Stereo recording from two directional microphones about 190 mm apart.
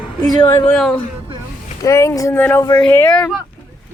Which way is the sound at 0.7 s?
5° left (ahead or behind).